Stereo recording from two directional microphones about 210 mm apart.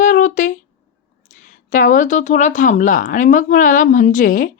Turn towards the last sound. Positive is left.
turn(degrees=40)  # may be behind; listen again after turning